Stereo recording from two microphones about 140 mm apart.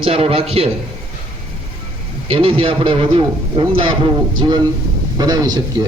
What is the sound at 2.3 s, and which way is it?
A man's voice, 40° right (ahead or behind).